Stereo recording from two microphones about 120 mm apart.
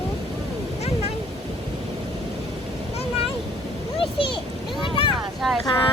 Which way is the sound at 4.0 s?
45° left (ahead or behind).